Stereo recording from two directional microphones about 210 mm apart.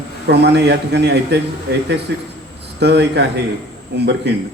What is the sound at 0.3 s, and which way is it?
A man's voice, 55° right (ahead or behind).